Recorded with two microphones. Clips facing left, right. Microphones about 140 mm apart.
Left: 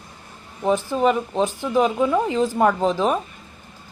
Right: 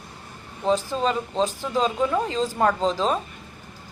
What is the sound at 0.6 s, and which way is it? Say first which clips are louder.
Speech: left 4 dB; 15° left (ahead or behind).